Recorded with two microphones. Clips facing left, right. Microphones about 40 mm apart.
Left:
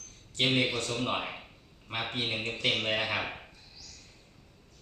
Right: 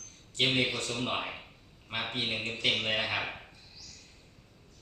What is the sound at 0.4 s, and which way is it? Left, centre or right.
Speech, centre.